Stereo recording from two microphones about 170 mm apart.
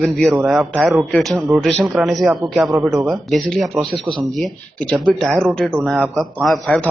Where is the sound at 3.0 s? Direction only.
Centre (ahead or behind).